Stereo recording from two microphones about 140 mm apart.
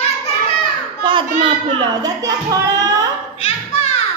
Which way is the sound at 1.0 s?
35° right (ahead or behind).